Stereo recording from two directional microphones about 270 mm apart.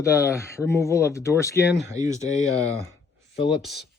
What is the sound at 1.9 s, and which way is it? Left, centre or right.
Speech, centre.